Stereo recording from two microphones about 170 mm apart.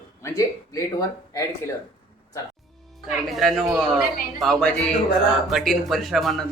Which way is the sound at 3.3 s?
Centre (ahead or behind).